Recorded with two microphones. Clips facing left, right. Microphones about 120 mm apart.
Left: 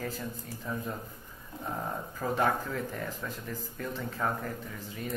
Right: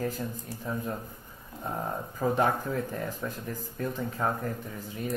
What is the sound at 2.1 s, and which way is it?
Speech, 20° right (ahead or behind).